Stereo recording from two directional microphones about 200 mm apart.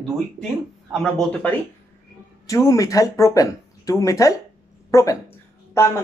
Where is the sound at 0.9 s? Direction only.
Centre (ahead or behind).